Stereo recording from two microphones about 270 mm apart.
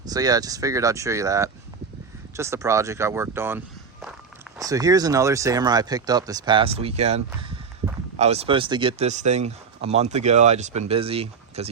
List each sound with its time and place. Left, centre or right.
0.1 s speech: centre